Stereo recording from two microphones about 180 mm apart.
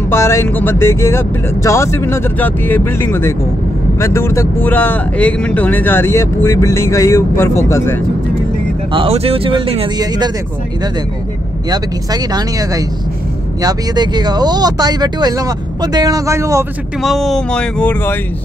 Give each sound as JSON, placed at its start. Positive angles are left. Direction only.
{"t": 0.1, "sound": "speech", "side_deg": 15}
{"t": 8.9, "sound": "speech", "side_deg": -30}
{"t": 11.7, "sound": "speech", "side_deg": -20}
{"t": 17.0, "sound": "speech", "side_deg": 0}